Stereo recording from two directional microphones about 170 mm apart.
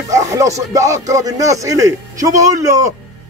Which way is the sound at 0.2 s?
20° right (ahead or behind).